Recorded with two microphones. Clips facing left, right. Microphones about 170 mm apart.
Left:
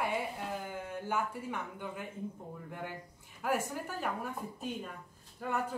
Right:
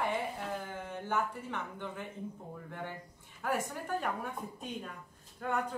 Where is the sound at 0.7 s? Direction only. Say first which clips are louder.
Even; 10° left (ahead or behind).